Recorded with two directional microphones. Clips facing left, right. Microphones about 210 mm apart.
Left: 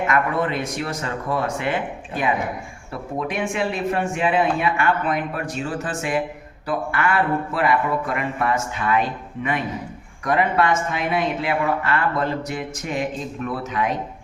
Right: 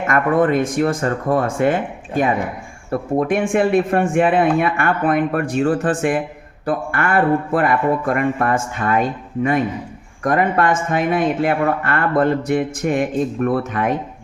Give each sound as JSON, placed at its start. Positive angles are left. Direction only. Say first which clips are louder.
{"t": 0.1, "sound": "speech", "louder": "right 11 dB", "side_deg": -50}